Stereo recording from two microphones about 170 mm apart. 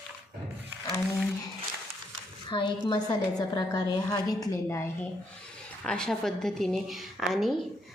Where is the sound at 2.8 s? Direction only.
25° left (ahead or behind).